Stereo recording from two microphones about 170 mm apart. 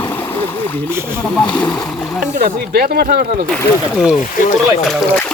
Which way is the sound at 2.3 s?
60° right (ahead or behind).